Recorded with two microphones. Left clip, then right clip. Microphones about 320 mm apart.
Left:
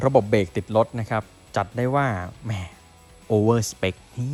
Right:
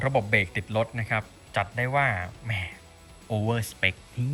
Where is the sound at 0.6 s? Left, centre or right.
Centre.